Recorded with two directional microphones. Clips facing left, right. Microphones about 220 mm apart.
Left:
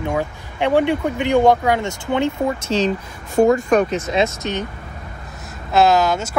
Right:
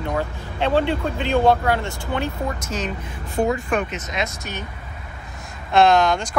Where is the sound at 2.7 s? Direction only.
30° left (ahead or behind).